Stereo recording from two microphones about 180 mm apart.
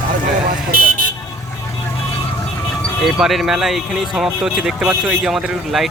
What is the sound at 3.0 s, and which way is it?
Speech, centre (ahead or behind).